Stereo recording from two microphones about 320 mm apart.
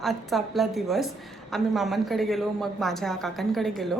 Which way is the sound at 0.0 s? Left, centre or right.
Centre.